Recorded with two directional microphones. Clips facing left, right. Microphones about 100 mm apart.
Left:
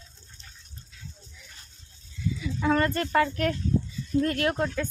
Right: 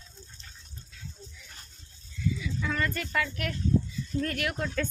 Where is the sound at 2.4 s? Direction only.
40° left (ahead or behind).